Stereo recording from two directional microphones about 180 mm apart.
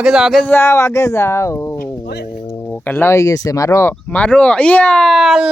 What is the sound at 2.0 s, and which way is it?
Speech, 60° left (ahead or behind).